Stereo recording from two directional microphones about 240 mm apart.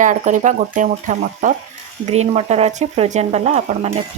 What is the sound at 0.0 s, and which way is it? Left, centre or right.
Speech, right.